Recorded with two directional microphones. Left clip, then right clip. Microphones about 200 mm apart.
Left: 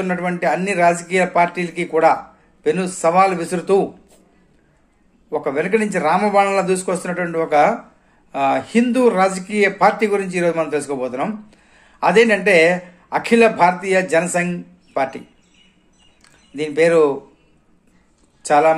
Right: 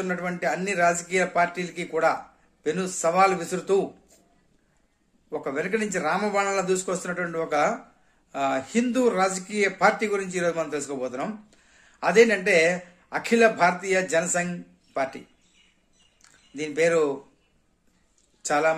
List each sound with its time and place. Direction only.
0.0 s a man's voice: 15° right (ahead or behind)
5.3 s a man's voice: 15° right (ahead or behind)